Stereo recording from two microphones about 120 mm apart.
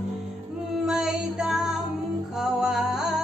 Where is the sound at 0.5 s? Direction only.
5° right (ahead or behind).